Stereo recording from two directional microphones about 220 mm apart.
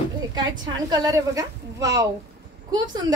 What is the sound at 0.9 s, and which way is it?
A woman's voice, 15° right (ahead or behind).